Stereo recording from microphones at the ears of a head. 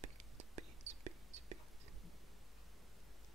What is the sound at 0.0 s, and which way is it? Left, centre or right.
Whispering, right.